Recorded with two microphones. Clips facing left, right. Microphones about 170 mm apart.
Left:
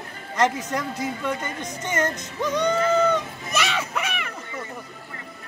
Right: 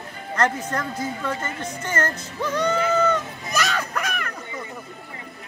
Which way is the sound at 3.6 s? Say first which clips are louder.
Right 1 dB; 5° left (ahead or behind).